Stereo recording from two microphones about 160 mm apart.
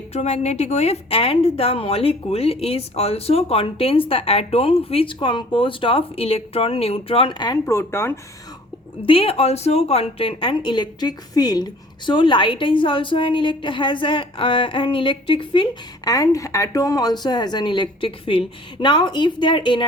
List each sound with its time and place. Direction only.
0.1 s a woman's voice: 40° left (ahead or behind); by 7.6 s 25° left (ahead or behind)
7.6 s speech: 15° left (ahead or behind)
9.0 s a woman's voice: 35° left (ahead or behind)
16.0 s speech: 20° left (ahead or behind)